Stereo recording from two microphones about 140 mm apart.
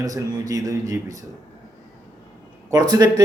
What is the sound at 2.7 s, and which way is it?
Speech, 30° right (ahead or behind).